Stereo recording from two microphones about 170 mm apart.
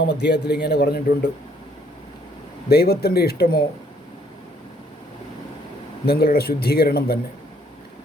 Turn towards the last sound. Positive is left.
turn(degrees=65)  # may be behind; listen again after turning